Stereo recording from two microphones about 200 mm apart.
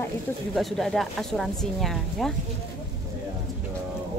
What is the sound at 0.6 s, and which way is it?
Speech, centre (ahead or behind).